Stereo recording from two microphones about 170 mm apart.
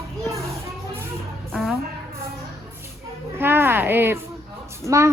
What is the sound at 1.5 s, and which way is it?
Speech, centre (ahead or behind).